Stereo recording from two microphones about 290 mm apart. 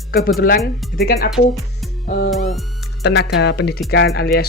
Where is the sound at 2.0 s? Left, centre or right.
Left.